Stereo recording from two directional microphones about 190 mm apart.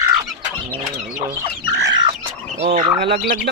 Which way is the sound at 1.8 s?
20° right (ahead or behind).